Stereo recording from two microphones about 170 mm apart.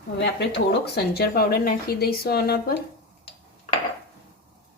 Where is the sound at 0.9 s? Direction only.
65° left (ahead or behind).